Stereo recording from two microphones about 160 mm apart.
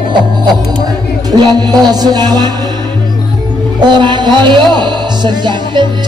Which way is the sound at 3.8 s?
30° right (ahead or behind).